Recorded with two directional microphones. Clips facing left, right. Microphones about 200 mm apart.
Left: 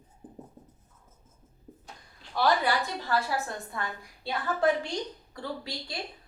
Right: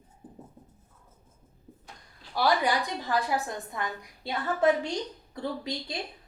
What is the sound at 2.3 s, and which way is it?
A woman's voice, 15° right (ahead or behind).